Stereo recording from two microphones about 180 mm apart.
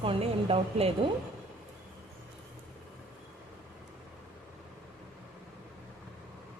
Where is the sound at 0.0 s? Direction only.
30° right (ahead or behind).